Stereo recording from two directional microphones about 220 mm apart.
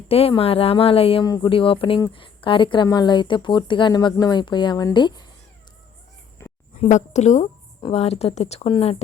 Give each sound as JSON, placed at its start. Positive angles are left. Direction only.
{"t": 0.1, "sound": "speech", "side_deg": 25}
{"t": 6.4, "sound": "a sound", "side_deg": 10}
{"t": 6.7, "sound": "a woman's voice", "side_deg": 30}